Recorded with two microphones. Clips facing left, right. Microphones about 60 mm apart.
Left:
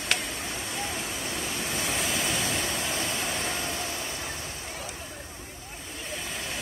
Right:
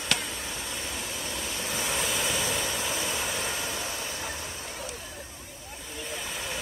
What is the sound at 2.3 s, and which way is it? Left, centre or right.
Vehicle, left.